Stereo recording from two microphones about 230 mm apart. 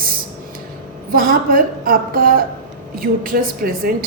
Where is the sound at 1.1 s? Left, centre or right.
Right.